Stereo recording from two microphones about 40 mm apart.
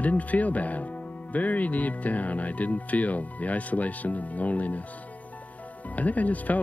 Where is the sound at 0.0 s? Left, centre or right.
Left.